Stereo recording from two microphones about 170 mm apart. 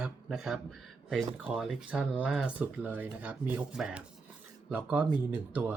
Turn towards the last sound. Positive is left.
turn(degrees=-10)  # may be behind; listen again after turning